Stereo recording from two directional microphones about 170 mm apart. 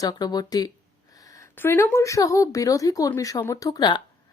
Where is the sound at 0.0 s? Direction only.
25° left (ahead or behind).